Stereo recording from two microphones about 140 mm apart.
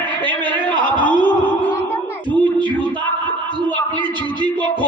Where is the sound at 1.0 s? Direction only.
75° left (ahead or behind).